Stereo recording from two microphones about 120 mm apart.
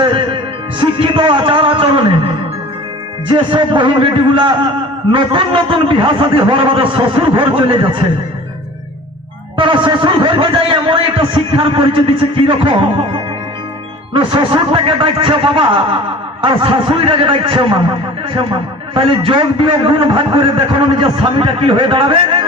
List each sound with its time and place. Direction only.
0.0 s music: 45° right (ahead or behind)
3.2 s a man's voice: 45° right (ahead or behind)
9.6 s a man's voice: 45° right (ahead or behind)
14.1 s a man's voice: 45° right (ahead or behind)
18.9 s a man's voice: 45° right (ahead or behind)